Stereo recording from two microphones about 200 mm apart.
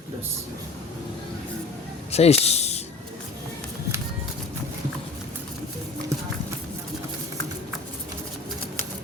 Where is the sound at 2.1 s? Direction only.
30° left (ahead or behind).